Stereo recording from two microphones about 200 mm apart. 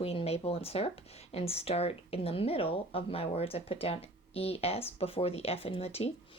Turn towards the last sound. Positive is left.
turn(degrees=30)  # may be behind; listen again after turning